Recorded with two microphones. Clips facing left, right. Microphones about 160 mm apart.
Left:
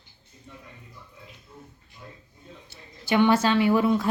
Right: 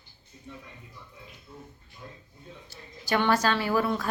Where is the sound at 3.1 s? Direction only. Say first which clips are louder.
Left 4 dB; 20° left (ahead or behind).